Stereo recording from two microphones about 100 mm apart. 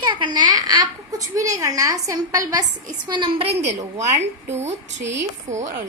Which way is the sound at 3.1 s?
60° right (ahead or behind).